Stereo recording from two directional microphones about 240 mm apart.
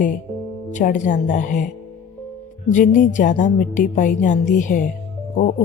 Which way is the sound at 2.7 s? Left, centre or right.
Left.